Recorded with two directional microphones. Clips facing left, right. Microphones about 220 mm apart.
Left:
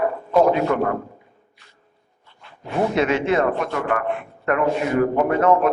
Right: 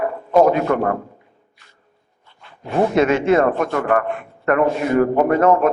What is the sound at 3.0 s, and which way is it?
A man's voice, 45° right (ahead or behind).